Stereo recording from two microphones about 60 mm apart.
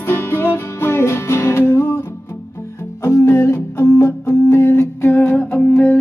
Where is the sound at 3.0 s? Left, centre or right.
Left.